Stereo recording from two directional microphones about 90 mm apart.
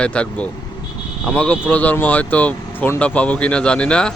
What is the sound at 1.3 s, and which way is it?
Speech, 10° left (ahead or behind).